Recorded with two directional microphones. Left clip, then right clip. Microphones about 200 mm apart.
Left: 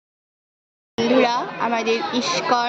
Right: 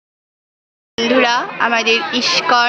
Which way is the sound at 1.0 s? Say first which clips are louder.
Right 4 dB; centre (ahead or behind).